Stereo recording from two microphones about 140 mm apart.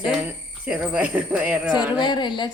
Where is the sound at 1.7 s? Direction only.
30° left (ahead or behind).